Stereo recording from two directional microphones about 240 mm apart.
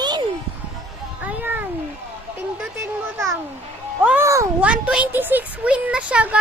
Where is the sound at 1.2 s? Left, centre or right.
Centre.